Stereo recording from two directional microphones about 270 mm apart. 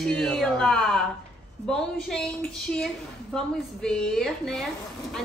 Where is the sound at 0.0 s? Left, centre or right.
Centre.